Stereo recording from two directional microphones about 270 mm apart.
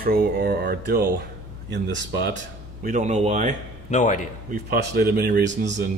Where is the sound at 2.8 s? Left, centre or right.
Right.